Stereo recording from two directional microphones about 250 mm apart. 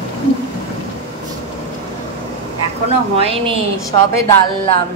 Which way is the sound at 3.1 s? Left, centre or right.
Right.